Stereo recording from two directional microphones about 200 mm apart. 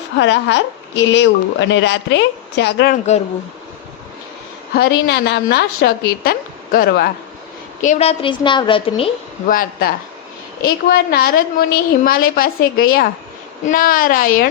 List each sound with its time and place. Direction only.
0.2 s a woman's voice: 65° left (ahead or behind)
4.7 s a woman's voice: 55° left (ahead or behind)
7.8 s a woman's voice: 35° left (ahead or behind)
9.5 s a woman's voice: 45° left (ahead or behind)